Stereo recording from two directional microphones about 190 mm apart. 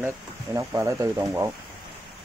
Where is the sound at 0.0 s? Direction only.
15° right (ahead or behind).